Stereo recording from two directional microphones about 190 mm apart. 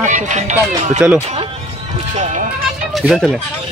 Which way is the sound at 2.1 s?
35° right (ahead or behind).